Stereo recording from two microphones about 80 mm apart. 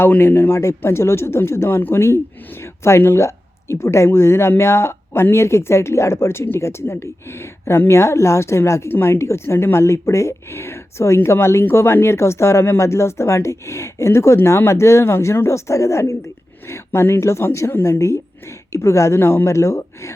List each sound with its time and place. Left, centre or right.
0.0 s speech: left
17.7 s speech: left